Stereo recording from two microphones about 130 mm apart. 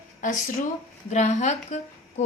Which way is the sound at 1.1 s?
60° left (ahead or behind).